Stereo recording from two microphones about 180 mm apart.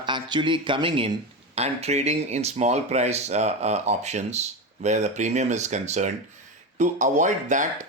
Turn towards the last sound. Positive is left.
turn(degrees=-45)  # may be behind; listen again after turning